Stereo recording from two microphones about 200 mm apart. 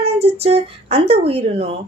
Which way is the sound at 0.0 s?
30° right (ahead or behind).